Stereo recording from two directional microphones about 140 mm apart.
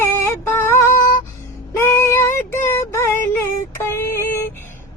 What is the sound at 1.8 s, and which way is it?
Child singing, 15° left (ahead or behind).